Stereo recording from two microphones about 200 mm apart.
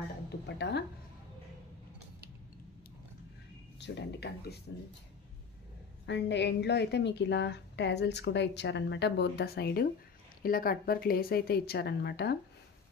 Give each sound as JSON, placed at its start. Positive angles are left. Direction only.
{"t": 0.6, "sound": "a woman's voice", "side_deg": 55}
{"t": 3.8, "sound": "a woman's voice", "side_deg": 55}
{"t": 6.0, "sound": "a woman's voice", "side_deg": 60}